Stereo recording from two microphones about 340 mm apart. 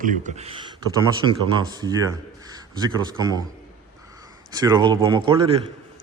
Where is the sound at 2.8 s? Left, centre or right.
Centre.